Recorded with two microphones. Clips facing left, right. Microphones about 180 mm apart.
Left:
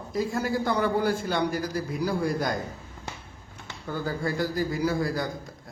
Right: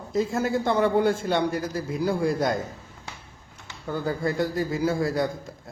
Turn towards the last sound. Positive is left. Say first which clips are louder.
# right 5 dB
turn(degrees=-25)  # may be behind; listen again after turning